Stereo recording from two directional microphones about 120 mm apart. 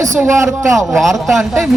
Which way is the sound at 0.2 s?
25° right (ahead or behind).